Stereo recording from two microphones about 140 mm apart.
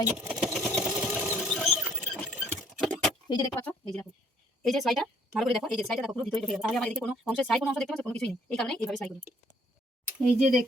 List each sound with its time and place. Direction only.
0.2 s vehicle: 5° right (ahead or behind)
0.9 s sewing machine: 20° right (ahead or behind); by 2.0 s centre (ahead or behind)
2.6 s keys jangling: centre (ahead or behind)
3.2 s speech: 30° left (ahead or behind)
3.5 s a woman's voice: 15° left (ahead or behind)
10.3 s speech: 5° right (ahead or behind)